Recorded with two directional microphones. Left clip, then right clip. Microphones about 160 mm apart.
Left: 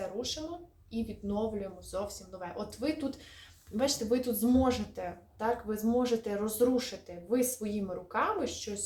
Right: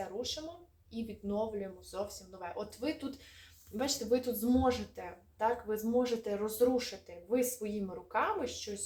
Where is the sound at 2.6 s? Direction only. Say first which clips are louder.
Left 4 dB; 5° left (ahead or behind).